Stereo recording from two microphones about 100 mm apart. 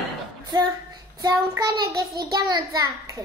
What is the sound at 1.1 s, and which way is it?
A child's voice, 40° right (ahead or behind).